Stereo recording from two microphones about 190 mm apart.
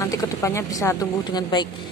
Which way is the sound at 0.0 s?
15° left (ahead or behind).